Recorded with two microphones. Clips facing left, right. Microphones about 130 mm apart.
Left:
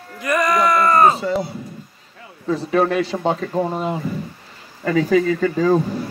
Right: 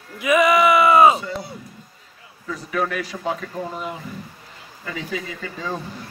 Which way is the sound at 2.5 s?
30° left (ahead or behind).